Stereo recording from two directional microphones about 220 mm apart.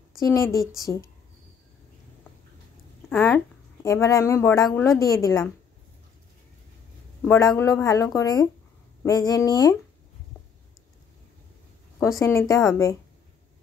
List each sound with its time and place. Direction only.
0.2 s speech: 15° left (ahead or behind)
3.1 s speech: 10° left (ahead or behind)
7.5 s speech: 15° left (ahead or behind)
12.2 s speech: 15° left (ahead or behind)